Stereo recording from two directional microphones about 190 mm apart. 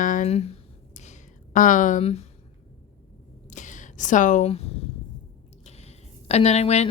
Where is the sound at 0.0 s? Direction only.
45° left (ahead or behind).